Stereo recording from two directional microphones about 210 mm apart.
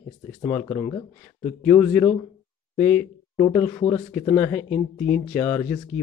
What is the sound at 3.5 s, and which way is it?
Speech, 15° left (ahead or behind).